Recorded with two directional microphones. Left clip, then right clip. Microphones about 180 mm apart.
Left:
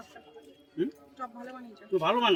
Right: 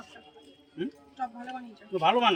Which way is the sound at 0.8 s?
35° left (ahead or behind).